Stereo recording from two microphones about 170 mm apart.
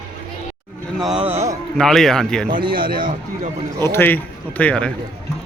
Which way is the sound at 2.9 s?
55° right (ahead or behind).